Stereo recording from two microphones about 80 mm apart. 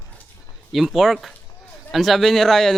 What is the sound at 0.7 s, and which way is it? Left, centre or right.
A man's voice, centre.